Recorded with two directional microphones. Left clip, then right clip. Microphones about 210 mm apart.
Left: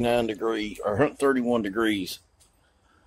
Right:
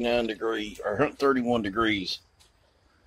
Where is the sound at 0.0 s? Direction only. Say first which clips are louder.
Left 2 dB; 15° left (ahead or behind).